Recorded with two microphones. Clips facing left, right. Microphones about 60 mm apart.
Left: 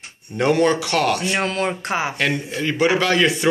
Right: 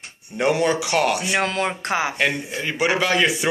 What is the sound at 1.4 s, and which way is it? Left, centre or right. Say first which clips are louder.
Speech: left 1 dB; right.